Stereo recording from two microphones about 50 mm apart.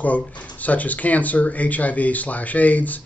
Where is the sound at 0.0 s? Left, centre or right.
Left.